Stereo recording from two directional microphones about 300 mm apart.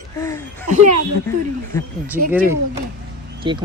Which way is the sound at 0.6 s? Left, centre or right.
Right.